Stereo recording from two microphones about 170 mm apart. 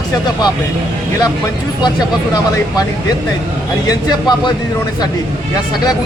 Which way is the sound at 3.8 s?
25° left (ahead or behind).